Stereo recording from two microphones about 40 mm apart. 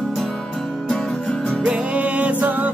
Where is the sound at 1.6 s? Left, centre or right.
Right.